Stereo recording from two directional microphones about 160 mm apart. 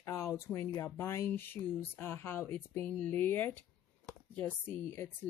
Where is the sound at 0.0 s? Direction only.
20° left (ahead or behind).